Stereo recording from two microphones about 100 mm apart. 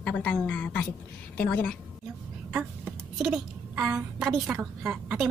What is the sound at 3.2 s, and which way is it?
A woman's voice, 5° right (ahead or behind).